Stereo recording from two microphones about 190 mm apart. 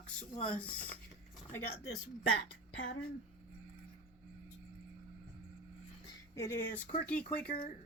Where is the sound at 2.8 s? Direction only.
85° left.